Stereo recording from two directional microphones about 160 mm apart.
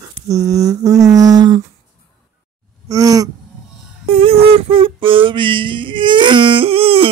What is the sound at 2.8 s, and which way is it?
Groan, 20° right (ahead or behind).